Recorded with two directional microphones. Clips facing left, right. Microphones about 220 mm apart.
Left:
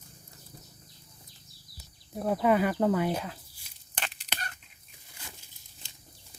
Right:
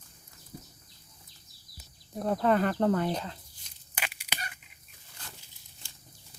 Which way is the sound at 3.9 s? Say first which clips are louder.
Even; 10° right (ahead or behind).